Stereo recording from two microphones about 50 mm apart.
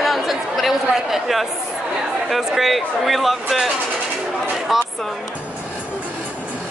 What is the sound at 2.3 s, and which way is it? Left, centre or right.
Speech, centre.